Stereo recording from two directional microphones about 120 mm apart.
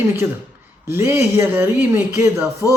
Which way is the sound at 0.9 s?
20° right (ahead or behind).